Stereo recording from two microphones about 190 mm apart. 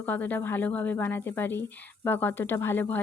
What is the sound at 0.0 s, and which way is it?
A woman's voice, 10° left (ahead or behind).